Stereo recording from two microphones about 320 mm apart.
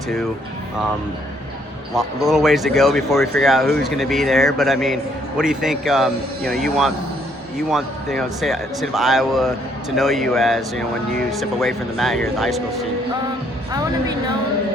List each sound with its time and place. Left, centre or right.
2.0 s speech: centre